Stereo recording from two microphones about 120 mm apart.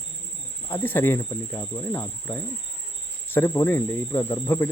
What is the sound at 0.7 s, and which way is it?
Speech, 15° left (ahead or behind).